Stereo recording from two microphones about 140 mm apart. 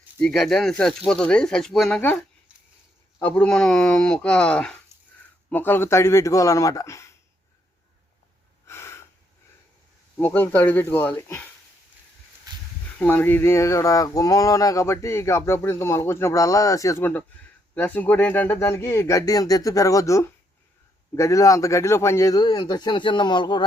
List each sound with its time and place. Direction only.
0.2 s speech: 5° left (ahead or behind)
3.2 s speech: 10° left (ahead or behind)
8.6 s a sound: 20° left (ahead or behind)
10.2 s speech: 15° left (ahead or behind)
12.5 s a sound: 30° right (ahead or behind)
13.0 s speech: 15° left (ahead or behind); by 23.6 s 35° left (ahead or behind)